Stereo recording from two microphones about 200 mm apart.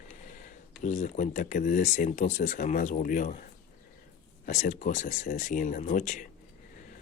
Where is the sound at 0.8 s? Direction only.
35° left (ahead or behind).